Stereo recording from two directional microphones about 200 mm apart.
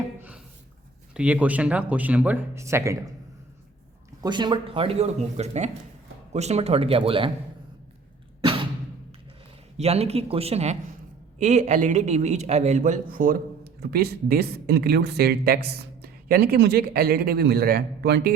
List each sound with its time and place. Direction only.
1.1 s speech: 5° right (ahead or behind)
4.2 s speech: 20° right (ahead or behind)
9.7 s a man's voice: 30° right (ahead or behind); by 18.3 s 50° right (ahead or behind)